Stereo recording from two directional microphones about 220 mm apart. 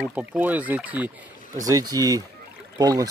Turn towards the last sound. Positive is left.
turn(degrees=-15)  # may be behind; listen again after turning